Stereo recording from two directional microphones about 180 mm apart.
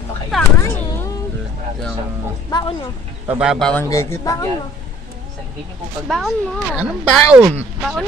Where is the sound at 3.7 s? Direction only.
15° left (ahead or behind).